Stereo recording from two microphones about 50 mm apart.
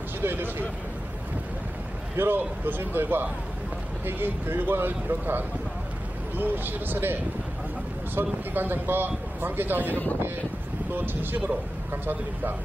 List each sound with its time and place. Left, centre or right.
0.2 s speech: right
2.1 s speech: right
11.0 s a man's voice: right